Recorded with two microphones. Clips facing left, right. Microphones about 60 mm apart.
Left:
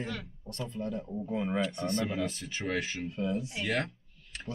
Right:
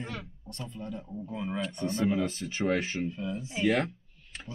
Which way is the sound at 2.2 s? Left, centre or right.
Right.